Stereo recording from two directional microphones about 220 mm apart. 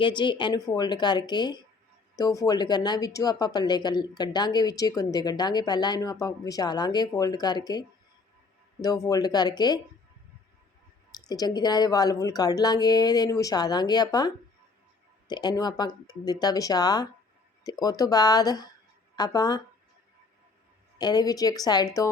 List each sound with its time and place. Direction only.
0.0 s speech: 20° left (ahead or behind)
11.1 s speech: 15° left (ahead or behind)
21.0 s speech: 15° left (ahead or behind)